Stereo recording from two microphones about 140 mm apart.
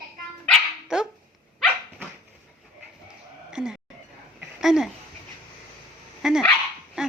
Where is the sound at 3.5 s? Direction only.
5° right (ahead or behind).